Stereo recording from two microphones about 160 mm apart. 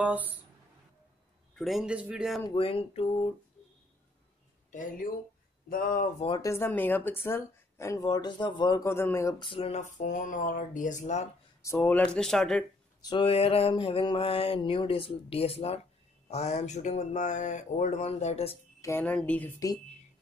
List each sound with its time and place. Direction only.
0.0 s speech: 10° right (ahead or behind)
1.6 s speech: centre (ahead or behind)
2.4 s a sound: 35° left (ahead or behind)
5.7 s speech: 60° left (ahead or behind)
6.1 s a sound: 35° left (ahead or behind)
6.4 s speech: 15° left (ahead or behind)
8.8 s speech: 15° left (ahead or behind)
9.4 s speech: 35° left (ahead or behind)
11.6 s speech: 15° left (ahead or behind)
13.0 s a sound: 30° left (ahead or behind)
16.3 s speech: 45° left (ahead or behind)
18.8 s speech: 15° left (ahead or behind)